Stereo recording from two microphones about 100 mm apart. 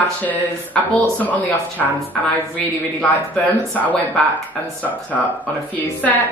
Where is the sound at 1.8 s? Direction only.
Centre (ahead or behind).